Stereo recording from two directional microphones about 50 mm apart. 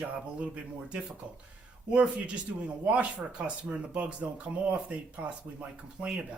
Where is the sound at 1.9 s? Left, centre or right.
Right.